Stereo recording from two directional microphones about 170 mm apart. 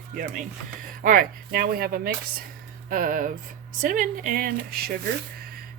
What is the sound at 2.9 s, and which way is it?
Music, 55° right (ahead or behind).